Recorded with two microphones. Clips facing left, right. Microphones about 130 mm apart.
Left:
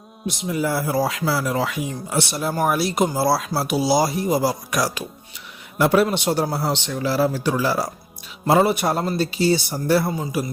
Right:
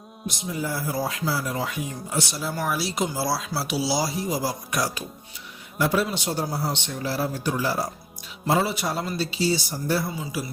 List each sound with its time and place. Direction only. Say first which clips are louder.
0.4 s speech: left 6 dB; 75° left (ahead or behind); by 5.0 s 90° left
5.7 s a man's voice: left 6 dB; 65° left (ahead or behind); by 7.9 s 90° left
8.4 s speech: left 6 dB; 60° left (ahead or behind)
10.1 s a man's voice: left 6 dB; 45° left (ahead or behind)